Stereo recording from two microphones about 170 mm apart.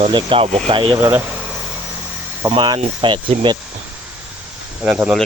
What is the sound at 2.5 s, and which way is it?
Speech, 30° right (ahead or behind).